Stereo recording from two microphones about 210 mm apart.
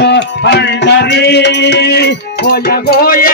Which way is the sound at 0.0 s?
55° left (ahead or behind).